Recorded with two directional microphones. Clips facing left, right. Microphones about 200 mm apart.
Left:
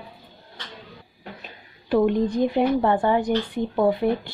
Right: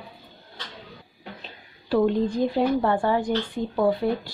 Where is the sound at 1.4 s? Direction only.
15° left (ahead or behind).